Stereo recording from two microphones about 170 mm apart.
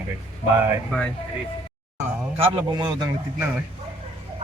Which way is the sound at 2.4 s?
25° right (ahead or behind).